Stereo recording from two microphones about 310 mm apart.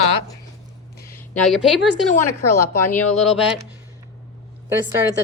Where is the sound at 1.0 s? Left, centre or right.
Centre.